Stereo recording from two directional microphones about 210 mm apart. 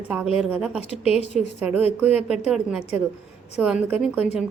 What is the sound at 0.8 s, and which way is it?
Speech, 30° left (ahead or behind).